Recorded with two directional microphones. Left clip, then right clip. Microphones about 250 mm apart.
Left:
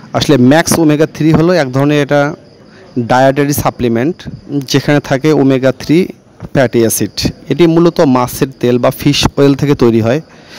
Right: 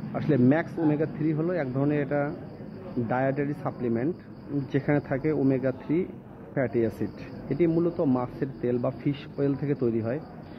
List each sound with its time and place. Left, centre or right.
0.1 s speech: left